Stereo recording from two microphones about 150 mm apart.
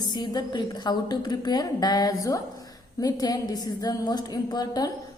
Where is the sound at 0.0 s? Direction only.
30° left (ahead or behind).